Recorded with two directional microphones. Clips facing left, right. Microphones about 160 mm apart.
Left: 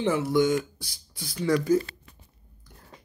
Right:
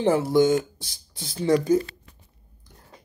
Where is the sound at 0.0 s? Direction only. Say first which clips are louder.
Right 4 dB; 30° right (ahead or behind).